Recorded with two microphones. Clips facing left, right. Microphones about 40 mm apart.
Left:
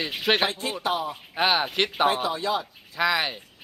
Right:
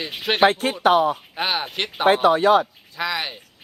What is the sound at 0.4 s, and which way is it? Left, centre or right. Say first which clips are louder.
Speech: right 10 dB; right.